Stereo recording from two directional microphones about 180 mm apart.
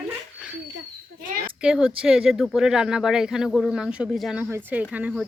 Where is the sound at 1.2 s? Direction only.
55° right (ahead or behind).